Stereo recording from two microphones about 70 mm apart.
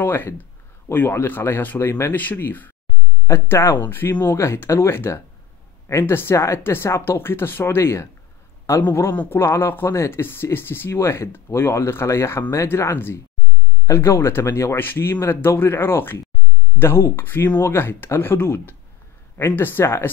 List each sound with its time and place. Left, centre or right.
0.0 s speech: left
14.8 s speech: left